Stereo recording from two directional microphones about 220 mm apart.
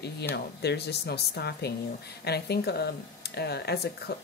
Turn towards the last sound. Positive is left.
turn(degrees=45)  # may be behind; listen again after turning